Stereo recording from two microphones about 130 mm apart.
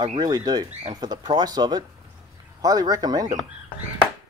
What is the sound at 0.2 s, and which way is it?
A man's voice, 30° right (ahead or behind).